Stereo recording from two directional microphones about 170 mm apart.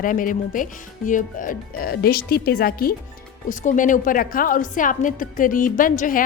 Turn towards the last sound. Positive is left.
turn(degrees=50)  # may be behind; listen again after turning